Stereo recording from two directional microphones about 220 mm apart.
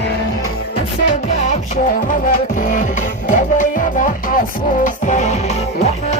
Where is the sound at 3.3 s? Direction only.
35° left (ahead or behind).